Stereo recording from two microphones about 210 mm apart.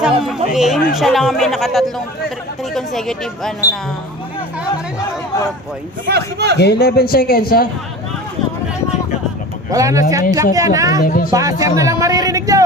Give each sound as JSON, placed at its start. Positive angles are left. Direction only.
{"t": 0.0, "sound": "speech", "side_deg": -5}
{"t": 6.1, "sound": "a man's voice", "side_deg": -50}
{"t": 6.6, "sound": "a man's voice", "side_deg": 50}
{"t": 9.7, "sound": "speech", "side_deg": -15}
{"t": 11.0, "sound": "a man's voice", "side_deg": 40}
{"t": 11.3, "sound": "speech", "side_deg": -15}